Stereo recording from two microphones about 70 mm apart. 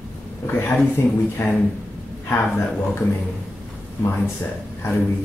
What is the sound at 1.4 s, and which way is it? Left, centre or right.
Speech, left.